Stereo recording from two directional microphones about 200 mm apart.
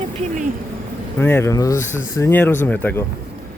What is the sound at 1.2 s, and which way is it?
Speech, 10° left (ahead or behind).